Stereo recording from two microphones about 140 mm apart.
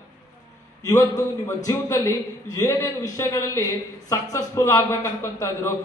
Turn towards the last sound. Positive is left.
turn(degrees=20)  # may be behind; listen again after turning